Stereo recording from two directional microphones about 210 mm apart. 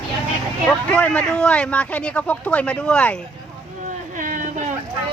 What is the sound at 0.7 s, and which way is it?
Speech, 5° left (ahead or behind).